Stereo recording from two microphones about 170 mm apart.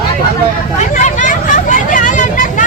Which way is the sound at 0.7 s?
45° left (ahead or behind).